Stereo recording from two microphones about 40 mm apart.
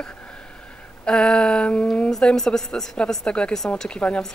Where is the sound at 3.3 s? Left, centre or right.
Left.